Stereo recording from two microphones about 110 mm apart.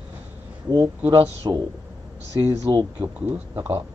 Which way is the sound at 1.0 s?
20° right (ahead or behind).